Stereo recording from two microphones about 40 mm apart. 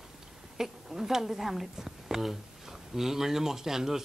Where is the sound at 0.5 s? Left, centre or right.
Centre.